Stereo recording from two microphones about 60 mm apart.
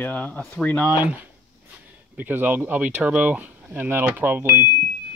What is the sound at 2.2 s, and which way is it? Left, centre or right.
Speech, right.